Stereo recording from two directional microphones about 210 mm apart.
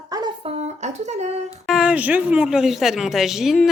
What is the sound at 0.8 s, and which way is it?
Speech, 35° right (ahead or behind).